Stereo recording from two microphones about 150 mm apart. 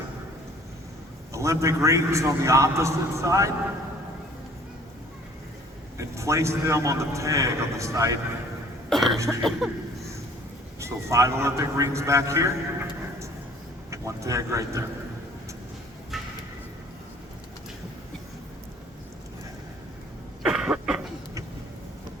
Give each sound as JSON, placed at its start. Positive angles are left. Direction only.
{"t": 1.3, "sound": "a man's voice", "side_deg": -20}
{"t": 6.0, "sound": "a man's voice", "side_deg": -20}
{"t": 8.9, "sound": "a sound", "side_deg": 0}
{"t": 9.1, "sound": "a man's voice", "side_deg": -20}
{"t": 9.6, "sound": "speech", "side_deg": 0}
{"t": 10.8, "sound": "a man's voice", "side_deg": -20}
{"t": 13.9, "sound": "a man's voice", "side_deg": -20}
{"t": 16.1, "sound": "a sound", "side_deg": 0}
{"t": 20.4, "sound": "a sound", "side_deg": -5}